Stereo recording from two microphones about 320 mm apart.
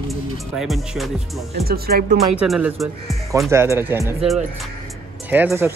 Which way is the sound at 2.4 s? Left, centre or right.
Centre.